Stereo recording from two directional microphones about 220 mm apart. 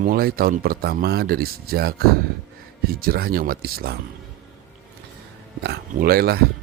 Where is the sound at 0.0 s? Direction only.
45° right (ahead or behind).